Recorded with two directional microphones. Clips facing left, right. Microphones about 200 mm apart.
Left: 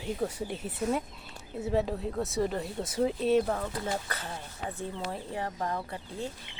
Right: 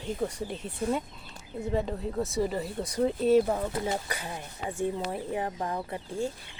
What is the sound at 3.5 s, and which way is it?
Speech, 20° right (ahead or behind).